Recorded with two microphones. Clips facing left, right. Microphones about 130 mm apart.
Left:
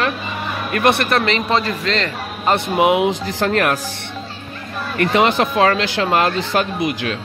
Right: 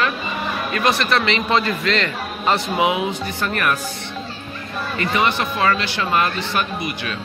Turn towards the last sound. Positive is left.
turn(degrees=90)